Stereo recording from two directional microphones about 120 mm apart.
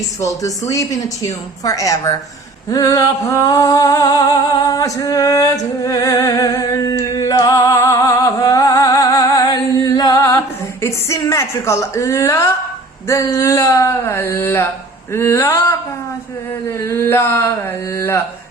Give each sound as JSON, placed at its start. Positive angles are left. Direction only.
{"t": 0.2, "sound": "a woman's voice", "side_deg": 25}
{"t": 2.6, "sound": "a sound", "side_deg": 30}
{"t": 13.1, "sound": "a woman's voice", "side_deg": 25}